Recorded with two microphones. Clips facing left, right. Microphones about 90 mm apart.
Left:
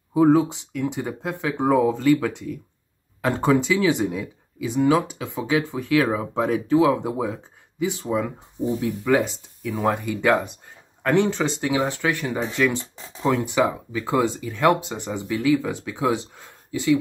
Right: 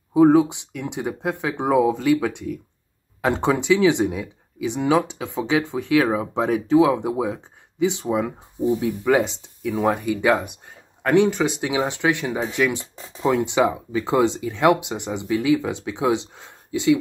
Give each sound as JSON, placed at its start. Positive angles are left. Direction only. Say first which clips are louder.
{"t": 0.1, "sound": "speech", "louder": "right 2 dB", "side_deg": -15}